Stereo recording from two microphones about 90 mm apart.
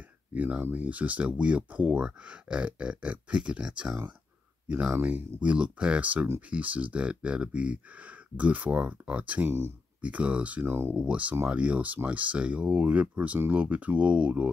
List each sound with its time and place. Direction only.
0.3 s speech: 15° right (ahead or behind)
9.5 s speech: 30° right (ahead or behind)
10.0 s speech: 15° right (ahead or behind)
10.6 s speech: 25° right (ahead or behind)
11.0 s speech: 15° right (ahead or behind)